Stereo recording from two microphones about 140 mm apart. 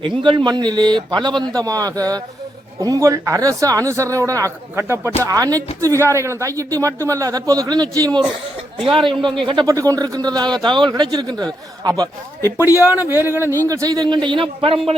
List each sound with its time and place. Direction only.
0.0 s a man's voice: 35° right (ahead or behind)
9.6 s a man's voice: 25° right (ahead or behind); by 14.9 s 40° right (ahead or behind)